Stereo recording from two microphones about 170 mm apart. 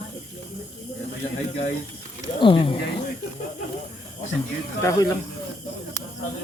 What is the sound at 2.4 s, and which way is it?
Speech, 30° left (ahead or behind).